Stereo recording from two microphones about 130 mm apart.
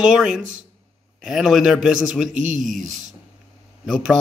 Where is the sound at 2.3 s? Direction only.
75° right (ahead or behind).